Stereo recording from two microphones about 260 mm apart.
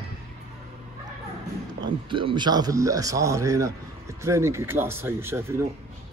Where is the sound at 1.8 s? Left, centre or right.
Centre.